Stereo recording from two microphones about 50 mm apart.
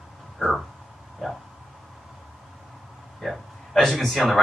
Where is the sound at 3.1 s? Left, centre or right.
Centre.